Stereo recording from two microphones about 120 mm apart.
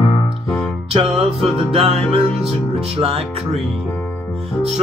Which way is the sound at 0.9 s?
55° right (ahead or behind).